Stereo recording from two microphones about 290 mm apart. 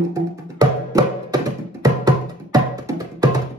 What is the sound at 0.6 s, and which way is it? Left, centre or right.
Music, centre.